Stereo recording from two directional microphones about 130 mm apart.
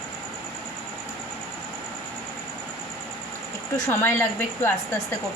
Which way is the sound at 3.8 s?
20° left (ahead or behind).